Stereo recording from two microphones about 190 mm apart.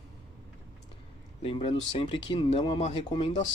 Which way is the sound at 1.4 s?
30° left (ahead or behind).